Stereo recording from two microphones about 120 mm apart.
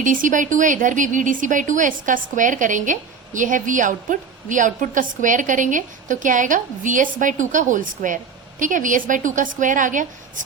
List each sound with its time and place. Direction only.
0.0 s a woman's voice: 90° right